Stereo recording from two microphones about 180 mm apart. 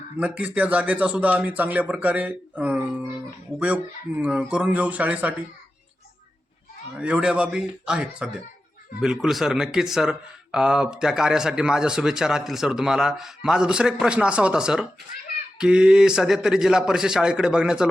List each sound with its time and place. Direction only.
0.2 s speech: 5° right (ahead or behind)
6.9 s speech: 5° right (ahead or behind)